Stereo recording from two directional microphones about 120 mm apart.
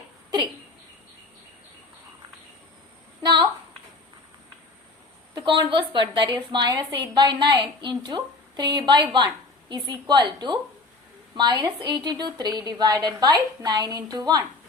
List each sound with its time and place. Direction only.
5.3 s a woman's voice: 45° right (ahead or behind)